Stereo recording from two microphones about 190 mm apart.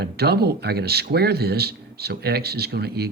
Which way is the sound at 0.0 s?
55° right (ahead or behind).